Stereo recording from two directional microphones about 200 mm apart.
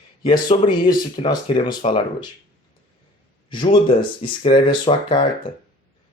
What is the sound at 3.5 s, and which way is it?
Speech, 25° left (ahead or behind).